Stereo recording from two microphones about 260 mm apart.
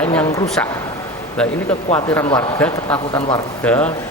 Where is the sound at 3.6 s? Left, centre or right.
Centre.